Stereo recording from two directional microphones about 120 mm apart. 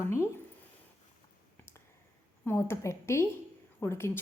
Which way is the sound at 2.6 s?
25° left (ahead or behind).